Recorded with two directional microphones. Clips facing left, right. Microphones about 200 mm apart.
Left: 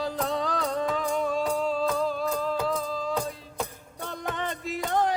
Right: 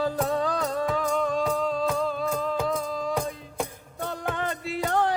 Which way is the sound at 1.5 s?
5° left (ahead or behind).